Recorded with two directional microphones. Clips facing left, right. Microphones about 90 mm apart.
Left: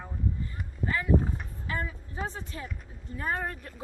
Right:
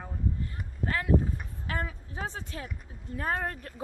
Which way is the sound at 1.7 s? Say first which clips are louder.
Even; 70° right (ahead or behind).